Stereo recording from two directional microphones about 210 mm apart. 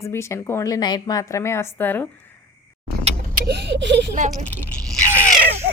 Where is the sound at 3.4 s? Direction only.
55° right (ahead or behind).